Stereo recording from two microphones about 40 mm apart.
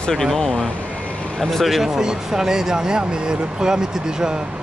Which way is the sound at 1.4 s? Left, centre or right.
Centre.